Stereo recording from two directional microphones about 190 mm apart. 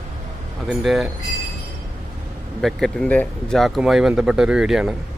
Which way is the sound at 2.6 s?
Centre (ahead or behind).